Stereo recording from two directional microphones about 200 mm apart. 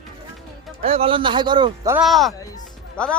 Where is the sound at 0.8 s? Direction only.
30° right (ahead or behind).